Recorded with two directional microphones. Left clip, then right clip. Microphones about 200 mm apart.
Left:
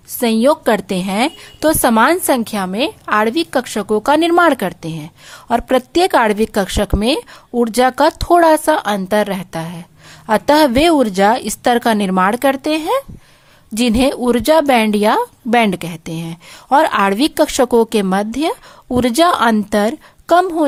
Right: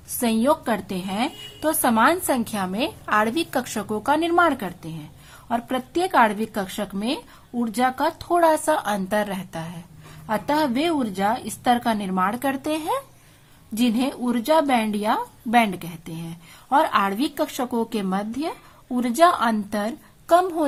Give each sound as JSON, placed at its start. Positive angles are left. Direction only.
{"t": 0.2, "sound": "a woman's voice", "side_deg": 40}